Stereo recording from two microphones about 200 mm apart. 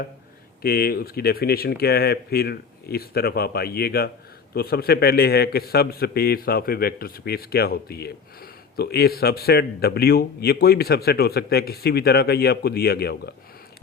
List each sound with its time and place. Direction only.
0.6 s a man's voice: 50° left (ahead or behind)